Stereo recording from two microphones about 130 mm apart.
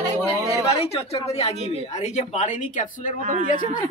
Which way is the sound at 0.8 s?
50° left (ahead or behind).